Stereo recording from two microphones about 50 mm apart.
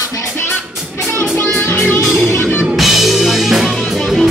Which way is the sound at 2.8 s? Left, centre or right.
Centre.